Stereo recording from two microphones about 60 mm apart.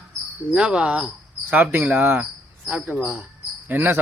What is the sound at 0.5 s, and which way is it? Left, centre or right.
Cricket, centre.